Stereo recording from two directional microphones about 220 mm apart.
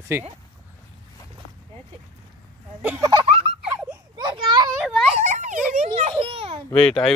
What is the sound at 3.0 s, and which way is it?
Speech, 20° right (ahead or behind).